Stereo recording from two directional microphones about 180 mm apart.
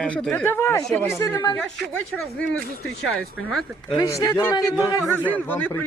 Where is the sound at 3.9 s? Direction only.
20° left (ahead or behind).